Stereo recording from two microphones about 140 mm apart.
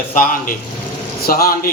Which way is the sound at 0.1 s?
85° left.